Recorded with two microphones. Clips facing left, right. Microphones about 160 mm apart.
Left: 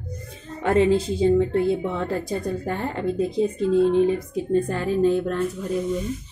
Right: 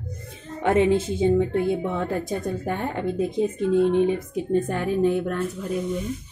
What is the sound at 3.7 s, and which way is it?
Speech, 20° right (ahead or behind).